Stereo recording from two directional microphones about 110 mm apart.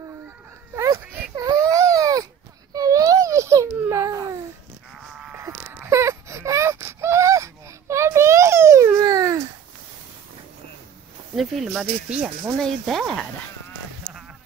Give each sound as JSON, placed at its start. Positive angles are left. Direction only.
{"t": 0.7, "sound": "a sound", "side_deg": -25}
{"t": 1.3, "sound": "baby cry", "side_deg": -35}
{"t": 2.7, "sound": "babbling", "side_deg": -35}
{"t": 5.4, "sound": "wail", "side_deg": -25}
{"t": 9.0, "sound": "a sound", "side_deg": -30}
{"t": 11.3, "sound": "speech", "side_deg": 0}
{"t": 12.5, "sound": "speech", "side_deg": 5}